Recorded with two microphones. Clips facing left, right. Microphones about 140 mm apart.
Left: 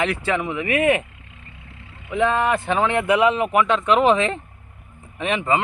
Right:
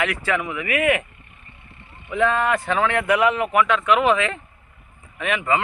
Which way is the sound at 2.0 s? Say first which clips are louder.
Left 1 dB; 20° left (ahead or behind).